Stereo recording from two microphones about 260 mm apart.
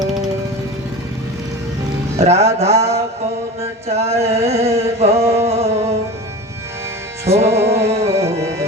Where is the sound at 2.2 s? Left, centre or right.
Right.